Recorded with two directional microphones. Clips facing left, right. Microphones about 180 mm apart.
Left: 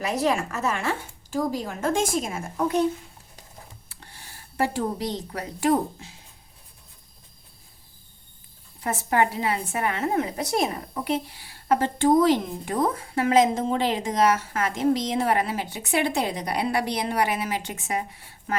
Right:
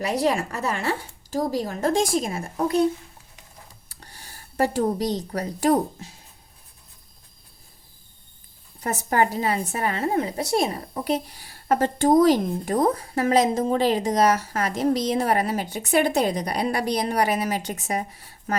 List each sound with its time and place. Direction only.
0.0 s a woman's voice: 35° right (ahead or behind)
3.8 s speech: 40° right (ahead or behind)
8.8 s a woman's voice: 40° right (ahead or behind)